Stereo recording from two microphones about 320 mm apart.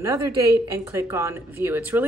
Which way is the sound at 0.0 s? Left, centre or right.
Centre.